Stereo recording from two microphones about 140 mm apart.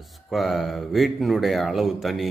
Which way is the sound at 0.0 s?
Centre (ahead or behind).